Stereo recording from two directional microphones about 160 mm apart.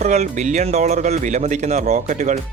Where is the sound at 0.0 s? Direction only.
45° right (ahead or behind).